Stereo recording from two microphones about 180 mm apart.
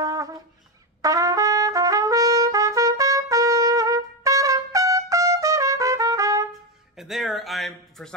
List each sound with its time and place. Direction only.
0.0 s wind instrument: 20° right (ahead or behind)
1.0 s trumpet: 20° right (ahead or behind)
7.0 s a sound: centre (ahead or behind)